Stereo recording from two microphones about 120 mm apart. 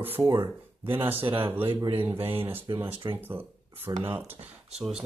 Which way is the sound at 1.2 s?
45° right (ahead or behind).